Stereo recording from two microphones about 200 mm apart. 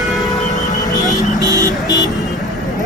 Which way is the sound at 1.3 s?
20° right (ahead or behind).